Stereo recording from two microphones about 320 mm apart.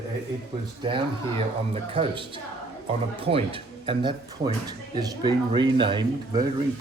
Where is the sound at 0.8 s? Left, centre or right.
Centre.